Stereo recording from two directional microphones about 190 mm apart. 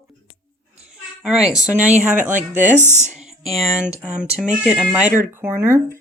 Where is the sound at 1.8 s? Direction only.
40° right (ahead or behind).